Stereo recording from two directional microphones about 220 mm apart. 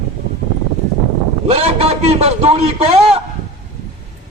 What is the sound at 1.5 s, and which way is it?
A man's voice, 25° right (ahead or behind).